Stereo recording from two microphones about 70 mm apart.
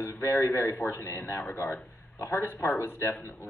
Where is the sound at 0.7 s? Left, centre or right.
Left.